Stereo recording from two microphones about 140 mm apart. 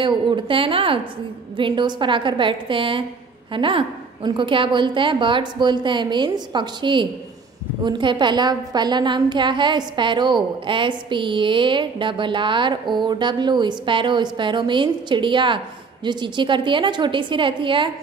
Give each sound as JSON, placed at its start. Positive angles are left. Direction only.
{"t": 0.0, "sound": "a woman's voice", "side_deg": -35}